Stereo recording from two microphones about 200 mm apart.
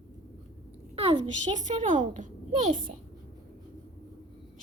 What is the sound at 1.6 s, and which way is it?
A woman's voice, 40° right (ahead or behind).